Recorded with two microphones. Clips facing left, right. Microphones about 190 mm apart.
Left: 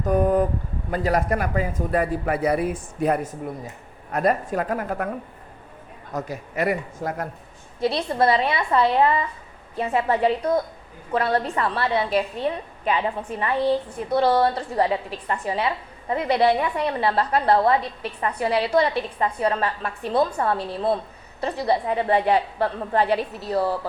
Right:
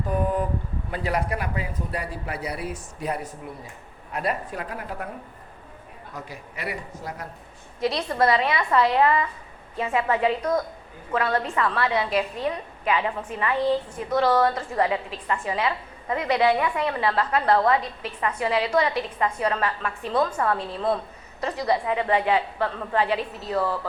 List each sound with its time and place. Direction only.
0.0 s a sound: 45° left (ahead or behind)
0.9 s a man's voice: 45° left (ahead or behind)
6.1 s a man's voice: 45° left (ahead or behind)
7.8 s a woman's voice: 30° left (ahead or behind)